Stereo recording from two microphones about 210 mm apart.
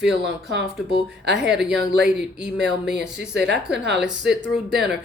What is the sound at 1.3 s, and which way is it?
Speech, centre (ahead or behind).